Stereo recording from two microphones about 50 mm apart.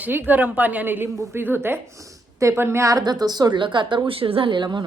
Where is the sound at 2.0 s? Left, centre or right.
Right.